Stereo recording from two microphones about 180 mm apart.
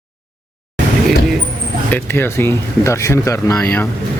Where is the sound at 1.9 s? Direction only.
10° left (ahead or behind).